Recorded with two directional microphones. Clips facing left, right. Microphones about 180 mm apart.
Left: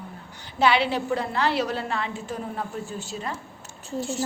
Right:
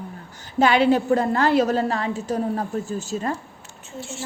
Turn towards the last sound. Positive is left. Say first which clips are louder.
# left 6 dB
turn(degrees=35)  # may be behind; listen again after turning